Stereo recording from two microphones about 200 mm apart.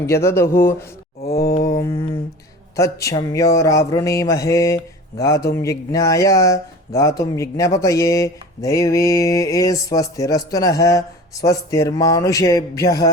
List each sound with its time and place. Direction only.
0.0 s speech: 10° left (ahead or behind)
1.2 s a sound: 50° left (ahead or behind)
1.6 s mantra: 15° left (ahead or behind)
2.7 s speech: 15° left (ahead or behind)